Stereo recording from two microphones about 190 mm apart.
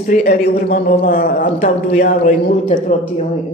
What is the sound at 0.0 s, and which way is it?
A man's voice, 50° left (ahead or behind).